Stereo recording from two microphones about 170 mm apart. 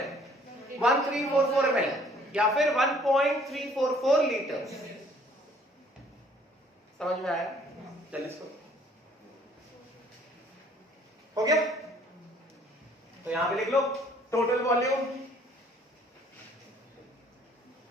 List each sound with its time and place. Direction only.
0.8 s a man's voice: centre (ahead or behind)
7.0 s a man's voice: centre (ahead or behind)
11.4 s a man's voice: 20° right (ahead or behind)
13.3 s a man's voice: centre (ahead or behind)
14.3 s a man's voice: 20° left (ahead or behind)